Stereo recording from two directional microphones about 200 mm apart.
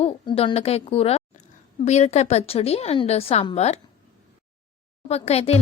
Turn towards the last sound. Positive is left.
turn(degrees=30)  # may be behind; listen again after turning